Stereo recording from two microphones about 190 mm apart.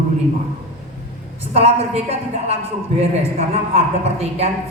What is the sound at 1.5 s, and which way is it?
A woman's voice, 35° right (ahead or behind).